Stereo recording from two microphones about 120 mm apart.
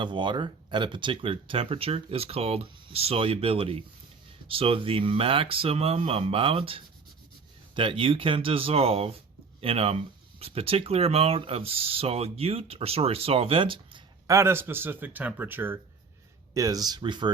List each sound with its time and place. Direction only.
0.0 s speech: 40° right (ahead or behind)
14.3 s speech: 20° right (ahead or behind)
16.6 s speech: 30° right (ahead or behind)